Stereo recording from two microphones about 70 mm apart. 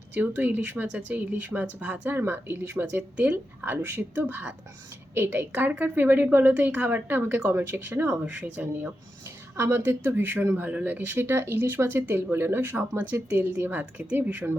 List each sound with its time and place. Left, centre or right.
0.1 s a woman's voice: right
2.1 s a woman's voice: right
9.6 s a woman's voice: right